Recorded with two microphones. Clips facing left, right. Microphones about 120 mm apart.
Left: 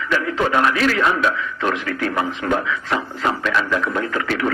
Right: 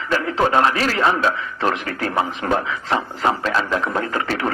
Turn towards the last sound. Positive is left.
turn(degrees=-30)  # may be behind; listen again after turning